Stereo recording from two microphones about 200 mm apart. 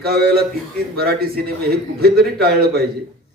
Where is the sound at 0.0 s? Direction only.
50° right (ahead or behind).